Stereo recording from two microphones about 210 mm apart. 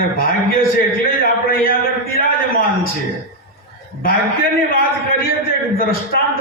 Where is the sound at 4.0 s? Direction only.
45° left (ahead or behind).